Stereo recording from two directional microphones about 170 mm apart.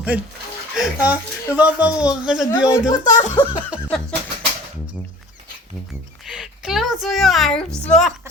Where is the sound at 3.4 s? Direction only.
25° left (ahead or behind).